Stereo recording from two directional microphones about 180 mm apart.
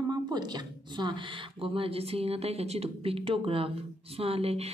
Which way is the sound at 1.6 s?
30° right (ahead or behind).